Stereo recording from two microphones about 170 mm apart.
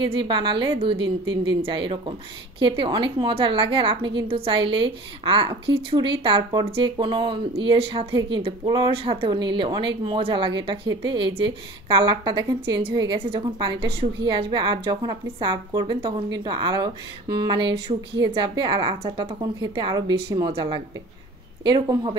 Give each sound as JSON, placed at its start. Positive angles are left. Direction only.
{"t": 0.0, "sound": "a woman's voice", "side_deg": -30}
{"t": 1.3, "sound": "speech", "side_deg": -90}
{"t": 1.6, "sound": "a woman's voice", "side_deg": -30}